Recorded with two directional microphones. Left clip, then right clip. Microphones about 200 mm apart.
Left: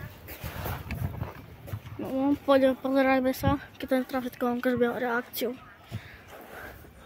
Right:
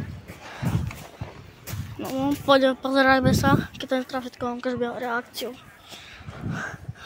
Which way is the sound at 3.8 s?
15° left (ahead or behind).